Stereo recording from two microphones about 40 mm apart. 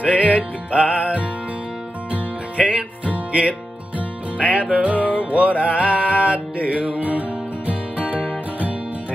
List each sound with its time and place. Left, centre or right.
0.0 s music: right
2.5 s music: right
4.4 s music: right